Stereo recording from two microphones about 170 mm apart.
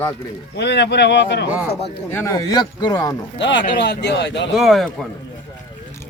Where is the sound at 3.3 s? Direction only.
90° left.